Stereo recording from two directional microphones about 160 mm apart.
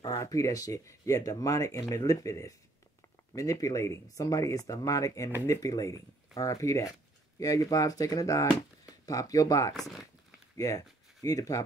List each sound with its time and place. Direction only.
0.0 s speech: 20° left (ahead or behind)
9.8 s speech: centre (ahead or behind)
11.2 s speech: 20° left (ahead or behind)